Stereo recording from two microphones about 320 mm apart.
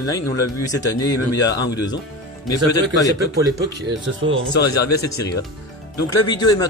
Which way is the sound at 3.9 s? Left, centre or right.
Right.